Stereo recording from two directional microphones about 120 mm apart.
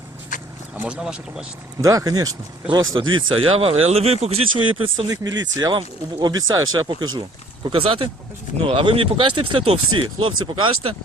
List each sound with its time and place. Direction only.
0.8 s speech: 10° right (ahead or behind)
1.8 s speech: 30° right (ahead or behind); by 5.0 s 45° right (ahead or behind)
5.0 s speech: 35° right (ahead or behind)